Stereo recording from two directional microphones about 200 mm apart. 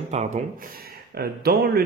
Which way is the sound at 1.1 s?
50° right (ahead or behind).